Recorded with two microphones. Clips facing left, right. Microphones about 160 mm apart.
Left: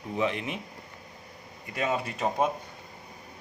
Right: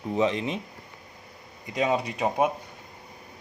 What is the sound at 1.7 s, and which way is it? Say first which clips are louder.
Speech: right 4 dB; 15° right (ahead or behind).